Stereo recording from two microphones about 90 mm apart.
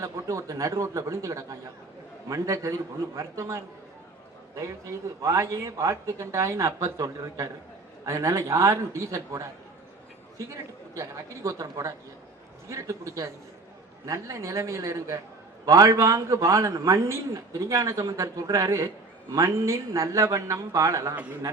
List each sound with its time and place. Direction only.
0.0 s a man's voice: 35° right (ahead or behind)